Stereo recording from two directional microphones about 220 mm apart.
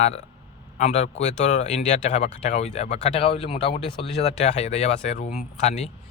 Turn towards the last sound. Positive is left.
turn(degrees=30)  # may be behind; listen again after turning